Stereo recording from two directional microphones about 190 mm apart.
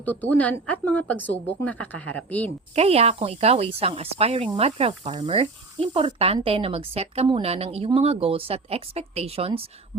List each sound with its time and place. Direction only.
0.0 s speech: 10° left (ahead or behind)
2.7 s speech: 30° right (ahead or behind)